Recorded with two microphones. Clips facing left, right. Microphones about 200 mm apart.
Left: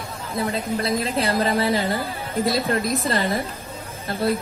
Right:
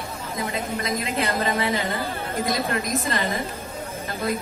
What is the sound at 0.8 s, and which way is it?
A woman's voice, 30° left (ahead or behind).